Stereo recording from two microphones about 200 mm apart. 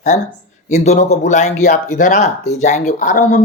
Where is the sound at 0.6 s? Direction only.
35° left (ahead or behind).